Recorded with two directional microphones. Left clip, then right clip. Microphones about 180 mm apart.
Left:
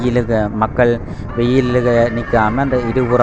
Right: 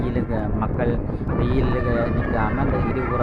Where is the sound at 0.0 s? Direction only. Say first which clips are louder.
Left 10 dB; 40° left (ahead or behind).